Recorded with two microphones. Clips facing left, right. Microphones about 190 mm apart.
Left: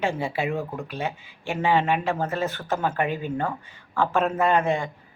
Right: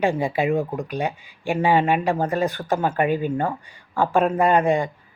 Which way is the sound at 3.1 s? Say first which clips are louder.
Right 6 dB; 50° right (ahead or behind).